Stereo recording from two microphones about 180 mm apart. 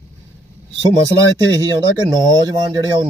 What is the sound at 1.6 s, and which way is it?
Speech, 25° right (ahead or behind).